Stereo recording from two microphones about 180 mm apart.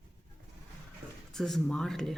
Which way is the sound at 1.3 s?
Centre (ahead or behind).